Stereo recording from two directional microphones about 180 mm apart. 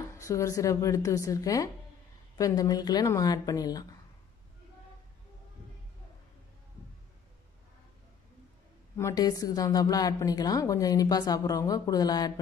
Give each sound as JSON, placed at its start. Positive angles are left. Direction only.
{"t": 0.2, "sound": "a woman's voice", "side_deg": 15}
{"t": 8.9, "sound": "a woman's voice", "side_deg": 20}